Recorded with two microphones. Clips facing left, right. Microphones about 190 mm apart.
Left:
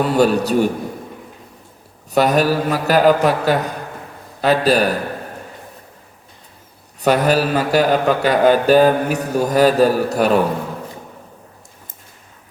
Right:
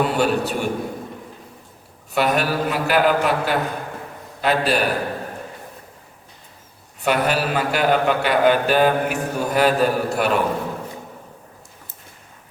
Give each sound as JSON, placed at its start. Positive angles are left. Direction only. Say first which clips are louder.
{"t": 0.0, "sound": "a man's voice", "louder": "left 4 dB", "side_deg": 40}
{"t": 2.1, "sound": "a man's voice", "louder": "left 5 dB", "side_deg": 40}
{"t": 7.0, "sound": "a man's voice", "louder": "left 5 dB", "side_deg": 40}